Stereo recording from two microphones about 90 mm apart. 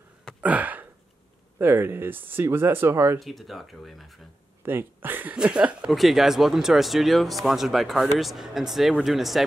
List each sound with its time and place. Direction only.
0.4 s a sound: 15° right (ahead or behind)
1.6 s speech: 25° right (ahead or behind)
3.2 s speech: centre (ahead or behind)
4.6 s speech: 25° right (ahead or behind)
5.3 s speech: 10° right (ahead or behind)
5.9 s speech: centre (ahead or behind)